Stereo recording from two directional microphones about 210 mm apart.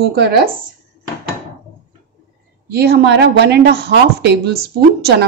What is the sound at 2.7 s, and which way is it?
Speech, 50° right (ahead or behind).